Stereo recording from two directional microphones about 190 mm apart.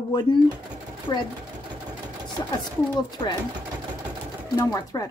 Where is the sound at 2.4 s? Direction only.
20° left (ahead or behind).